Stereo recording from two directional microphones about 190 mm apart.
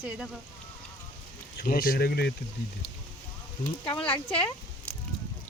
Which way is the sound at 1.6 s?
50° left (ahead or behind).